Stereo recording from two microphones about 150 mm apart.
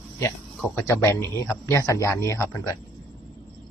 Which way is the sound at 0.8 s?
20° left (ahead or behind).